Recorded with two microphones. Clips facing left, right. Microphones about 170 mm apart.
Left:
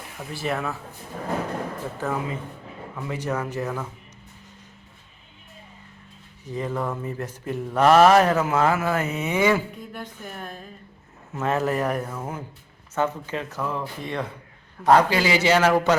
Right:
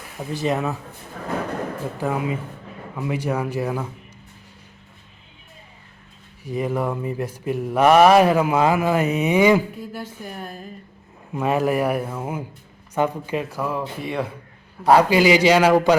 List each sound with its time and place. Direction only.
0.3 s speech: 20° right (ahead or behind)
2.0 s mantra: 15° right (ahead or behind)
6.4 s mantra: 10° right (ahead or behind)
9.9 s speech: 10° right (ahead or behind)
11.3 s mantra: 15° right (ahead or behind)